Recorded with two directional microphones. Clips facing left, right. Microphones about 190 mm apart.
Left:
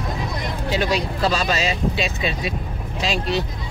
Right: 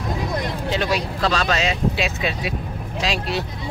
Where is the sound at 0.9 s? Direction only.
5° left (ahead or behind).